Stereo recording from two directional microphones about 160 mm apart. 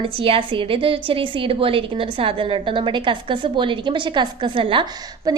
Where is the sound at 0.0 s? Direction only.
35° right (ahead or behind).